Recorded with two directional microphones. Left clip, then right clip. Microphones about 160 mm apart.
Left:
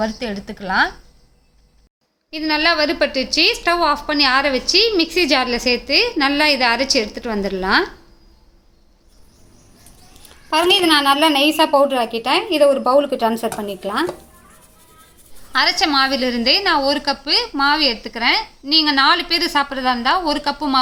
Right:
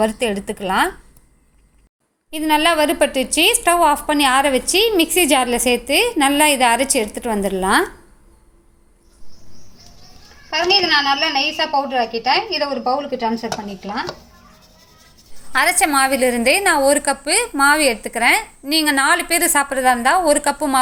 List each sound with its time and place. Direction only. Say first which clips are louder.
0.0 s a woman's voice: right 5 dB; 20° right (ahead or behind)
2.3 s a woman's voice: right 1 dB; 10° right (ahead or behind)
10.5 s a woman's voice: left 1 dB; 45° left (ahead or behind)
15.8 s a woman's voice: right 1 dB; 10° right (ahead or behind)